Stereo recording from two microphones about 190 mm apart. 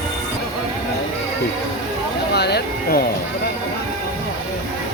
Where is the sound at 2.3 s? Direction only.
60° left (ahead or behind).